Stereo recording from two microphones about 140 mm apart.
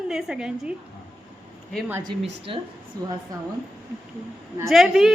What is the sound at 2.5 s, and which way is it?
Speech, 40° right (ahead or behind).